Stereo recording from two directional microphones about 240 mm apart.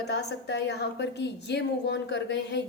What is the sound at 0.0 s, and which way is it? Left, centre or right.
A woman's voice, left.